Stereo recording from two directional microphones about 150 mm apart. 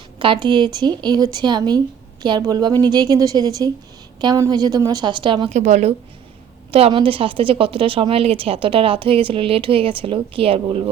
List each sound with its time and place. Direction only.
0.2 s a woman's voice: 35° right (ahead or behind)
5.5 s a woman's voice: 50° right (ahead or behind)
6.7 s a woman's voice: 40° right (ahead or behind)